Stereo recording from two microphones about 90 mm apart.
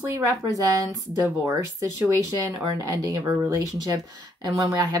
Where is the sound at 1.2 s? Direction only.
25° right (ahead or behind).